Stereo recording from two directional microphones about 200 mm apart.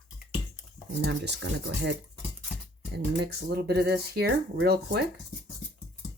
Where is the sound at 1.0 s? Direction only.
60° right (ahead or behind).